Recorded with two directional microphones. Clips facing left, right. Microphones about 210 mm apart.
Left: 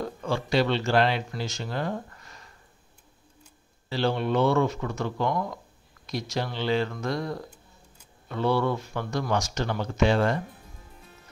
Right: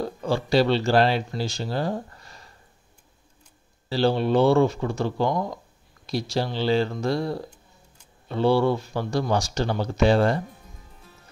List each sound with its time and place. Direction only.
0.0 s speech: 35° right (ahead or behind)
3.9 s speech: 35° right (ahead or behind)